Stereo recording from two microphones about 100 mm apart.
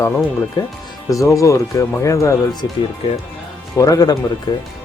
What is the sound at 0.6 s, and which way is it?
Speech, 45° left (ahead or behind).